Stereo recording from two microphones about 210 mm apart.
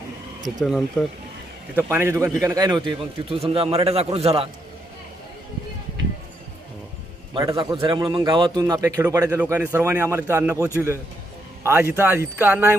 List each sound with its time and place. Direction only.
0.6 s speech: centre (ahead or behind)
1.7 s a man's voice: 10° right (ahead or behind); by 4.4 s 25° right (ahead or behind)
7.3 s a man's voice: 20° right (ahead or behind)